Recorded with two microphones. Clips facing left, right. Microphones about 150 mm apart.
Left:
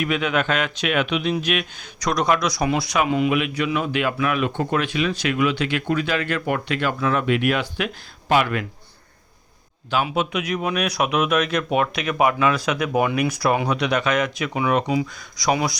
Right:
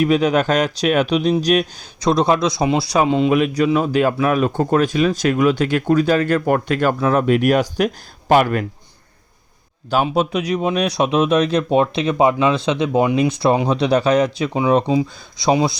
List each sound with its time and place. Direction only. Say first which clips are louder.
0.0 s speech: right 7 dB; 35° right (ahead or behind)
9.9 s speech: right 5 dB; 40° right (ahead or behind)